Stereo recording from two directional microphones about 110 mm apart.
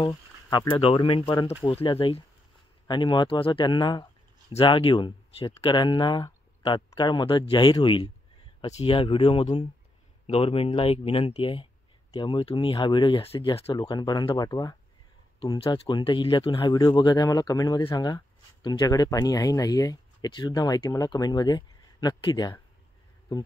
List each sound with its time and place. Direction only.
0.0 s speech: 40° left (ahead or behind)
13.2 s speech: 60° left (ahead or behind)
13.7 s speech: 40° left (ahead or behind)
15.4 s speech: 45° left (ahead or behind)